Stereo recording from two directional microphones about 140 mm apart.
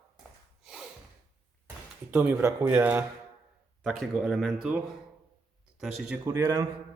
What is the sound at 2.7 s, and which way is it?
Speech, 10° right (ahead or behind).